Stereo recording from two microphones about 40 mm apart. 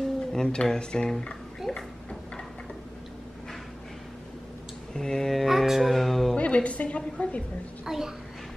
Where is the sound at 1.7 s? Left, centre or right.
Centre.